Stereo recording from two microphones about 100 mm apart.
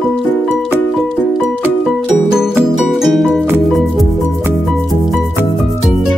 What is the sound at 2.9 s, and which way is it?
Music, centre (ahead or behind).